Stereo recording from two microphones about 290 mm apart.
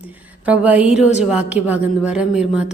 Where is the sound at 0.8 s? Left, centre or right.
Left.